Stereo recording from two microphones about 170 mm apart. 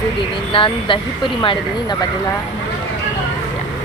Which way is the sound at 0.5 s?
30° left (ahead or behind).